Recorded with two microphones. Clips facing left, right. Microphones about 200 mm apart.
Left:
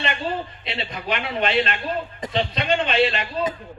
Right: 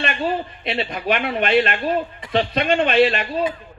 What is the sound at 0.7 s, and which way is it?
A man's voice, 55° right (ahead or behind).